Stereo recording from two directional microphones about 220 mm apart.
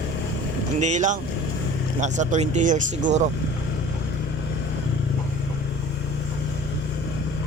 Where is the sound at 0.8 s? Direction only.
35° right (ahead or behind).